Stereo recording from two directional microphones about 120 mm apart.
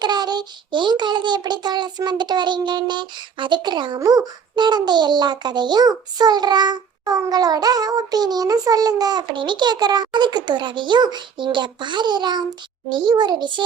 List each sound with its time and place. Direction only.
0.0 s child singing: 35° right (ahead or behind)